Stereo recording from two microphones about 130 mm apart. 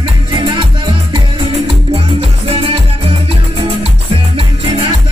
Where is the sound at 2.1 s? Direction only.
45° right (ahead or behind).